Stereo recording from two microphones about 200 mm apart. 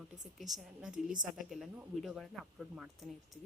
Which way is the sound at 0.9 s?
40° right (ahead or behind).